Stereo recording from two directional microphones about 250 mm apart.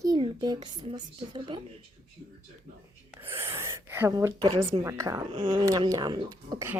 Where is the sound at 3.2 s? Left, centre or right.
Centre.